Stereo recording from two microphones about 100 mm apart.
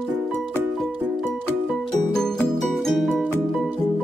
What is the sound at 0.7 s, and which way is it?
Music, centre (ahead or behind).